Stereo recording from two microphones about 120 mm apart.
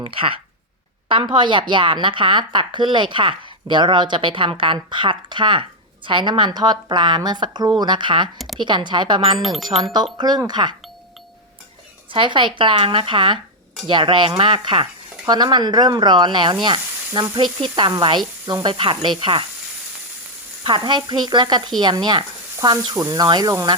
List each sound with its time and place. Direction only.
0.0 s a woman's voice: 45° right (ahead or behind)
9.4 s speech: centre (ahead or behind)
9.9 s a woman's voice: 35° right (ahead or behind)
12.1 s a woman's voice: 45° right (ahead or behind)
16.6 s sizzle: 40° right (ahead or behind)
17.3 s a woman's voice: 40° right (ahead or behind)
20.7 s a woman's voice: 40° right (ahead or behind)